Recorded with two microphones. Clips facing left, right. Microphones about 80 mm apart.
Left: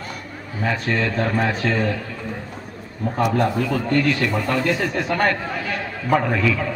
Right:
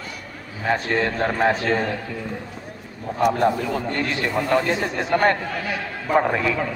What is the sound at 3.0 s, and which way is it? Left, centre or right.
Speech, left.